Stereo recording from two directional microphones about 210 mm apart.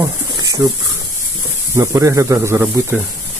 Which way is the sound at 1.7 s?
15° right (ahead or behind).